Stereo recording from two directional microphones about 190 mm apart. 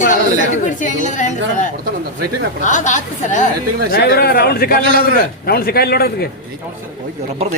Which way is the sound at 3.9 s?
60° left (ahead or behind).